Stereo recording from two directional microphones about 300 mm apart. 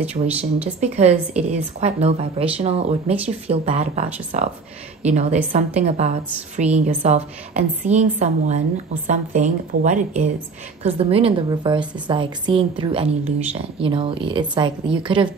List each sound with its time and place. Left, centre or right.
0.0 s speech: centre
0.7 s a woman's voice: right